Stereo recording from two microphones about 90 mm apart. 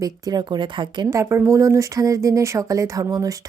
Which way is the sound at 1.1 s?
30° right (ahead or behind).